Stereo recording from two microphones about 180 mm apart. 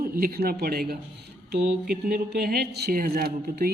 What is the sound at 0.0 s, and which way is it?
A man's voice, 55° right (ahead or behind).